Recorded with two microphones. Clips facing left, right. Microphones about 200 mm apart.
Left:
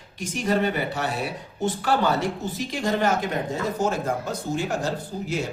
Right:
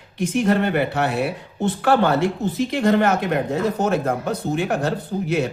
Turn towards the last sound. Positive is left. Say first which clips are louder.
# right 6 dB
turn(degrees=-65)  # may be behind; listen again after turning